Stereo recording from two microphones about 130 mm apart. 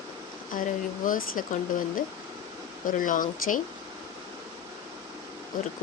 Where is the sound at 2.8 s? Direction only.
90° left.